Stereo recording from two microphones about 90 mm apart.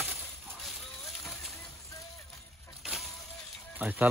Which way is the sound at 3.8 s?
15° right (ahead or behind).